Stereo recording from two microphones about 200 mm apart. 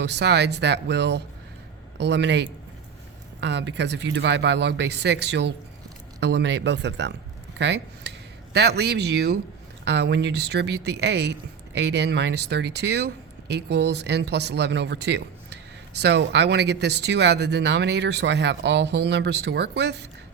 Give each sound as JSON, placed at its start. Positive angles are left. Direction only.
{"t": 0.0, "sound": "speech", "side_deg": -55}